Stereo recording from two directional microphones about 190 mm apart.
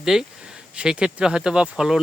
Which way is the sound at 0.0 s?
5° right (ahead or behind).